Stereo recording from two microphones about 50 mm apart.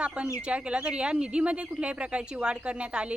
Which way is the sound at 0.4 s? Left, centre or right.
Centre.